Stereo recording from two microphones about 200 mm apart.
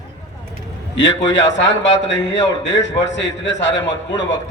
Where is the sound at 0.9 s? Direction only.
65° left (ahead or behind).